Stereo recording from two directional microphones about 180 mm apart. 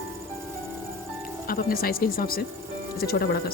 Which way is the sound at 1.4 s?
55° left (ahead or behind).